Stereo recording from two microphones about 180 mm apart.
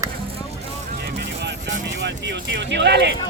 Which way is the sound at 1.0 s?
70° right (ahead or behind).